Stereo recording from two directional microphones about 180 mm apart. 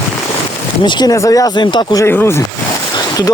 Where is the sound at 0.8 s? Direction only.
25° left (ahead or behind).